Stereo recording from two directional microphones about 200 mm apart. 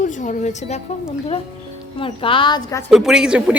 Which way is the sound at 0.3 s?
35° left (ahead or behind).